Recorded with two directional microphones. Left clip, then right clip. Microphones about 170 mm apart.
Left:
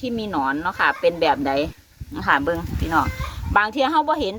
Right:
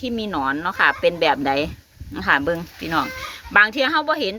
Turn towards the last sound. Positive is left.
turn(degrees=-10)  # may be behind; listen again after turning